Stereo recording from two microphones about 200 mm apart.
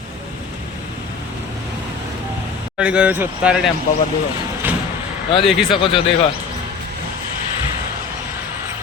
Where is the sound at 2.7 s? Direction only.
5° right (ahead or behind).